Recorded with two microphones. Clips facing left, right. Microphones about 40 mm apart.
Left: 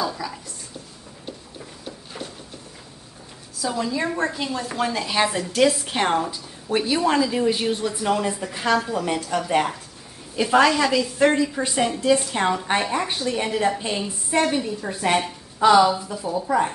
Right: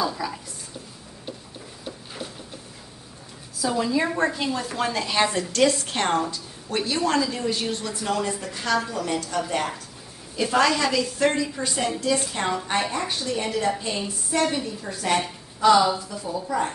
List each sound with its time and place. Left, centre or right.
0.0 s a sound: centre
1.9 s a sound: centre
3.5 s a woman's voice: centre
10.4 s a woman's voice: centre
11.5 s a woman's voice: centre
15.6 s a woman's voice: centre